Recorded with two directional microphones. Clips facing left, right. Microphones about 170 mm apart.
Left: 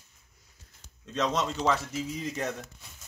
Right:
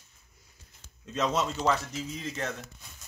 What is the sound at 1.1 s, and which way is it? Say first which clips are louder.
Dishes: even; 5° right (ahead or behind).